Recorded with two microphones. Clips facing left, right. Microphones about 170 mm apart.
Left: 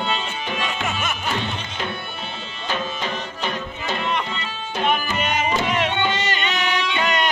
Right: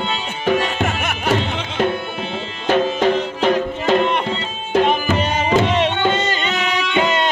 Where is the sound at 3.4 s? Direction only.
90° right.